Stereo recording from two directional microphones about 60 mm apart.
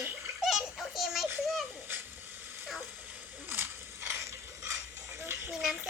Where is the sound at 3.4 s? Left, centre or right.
Right.